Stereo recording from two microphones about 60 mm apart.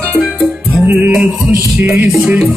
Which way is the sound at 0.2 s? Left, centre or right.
Centre.